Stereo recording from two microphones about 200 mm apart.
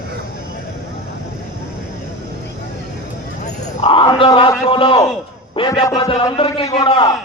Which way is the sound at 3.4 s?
30° left (ahead or behind).